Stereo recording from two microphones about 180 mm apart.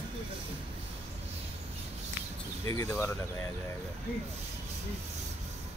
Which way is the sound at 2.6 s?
15° left (ahead or behind).